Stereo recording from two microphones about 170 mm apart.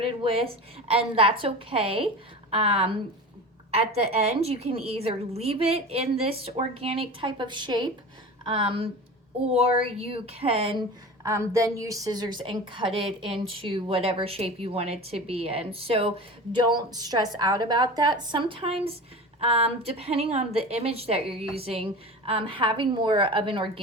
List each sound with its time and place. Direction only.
0.0 s a woman's voice: 35° right (ahead or behind)
11.2 s a woman's voice: 15° right (ahead or behind)